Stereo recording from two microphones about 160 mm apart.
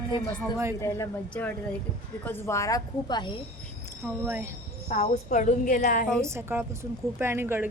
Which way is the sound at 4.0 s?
15° right (ahead or behind).